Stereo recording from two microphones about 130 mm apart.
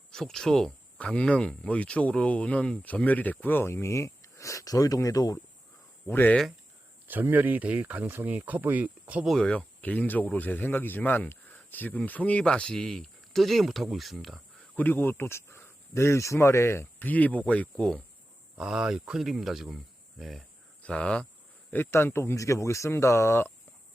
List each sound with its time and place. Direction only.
0.1 s speech: 5° left (ahead or behind); by 5.4 s 30° left (ahead or behind)
6.1 s speech: 15° left (ahead or behind)
7.1 s speech: 15° right (ahead or behind)
9.3 s speech: 5° left (ahead or behind)
14.8 s speech: 15° left (ahead or behind)
18.5 s speech: 5° right (ahead or behind); by 23.5 s 20° left (ahead or behind)